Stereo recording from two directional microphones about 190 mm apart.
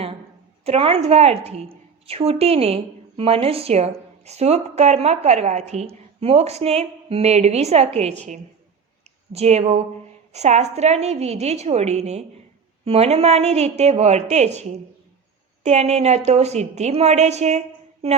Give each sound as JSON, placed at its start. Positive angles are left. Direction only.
{"t": 0.6, "sound": "a woman's voice", "side_deg": -30}